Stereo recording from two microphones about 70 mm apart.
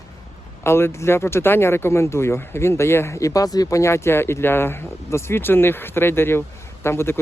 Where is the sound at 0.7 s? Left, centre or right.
Left.